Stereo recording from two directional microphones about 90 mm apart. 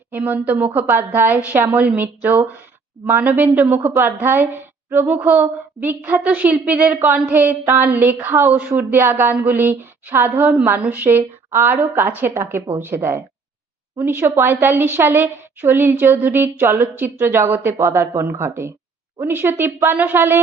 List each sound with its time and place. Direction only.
0.1 s a woman's voice: 15° right (ahead or behind)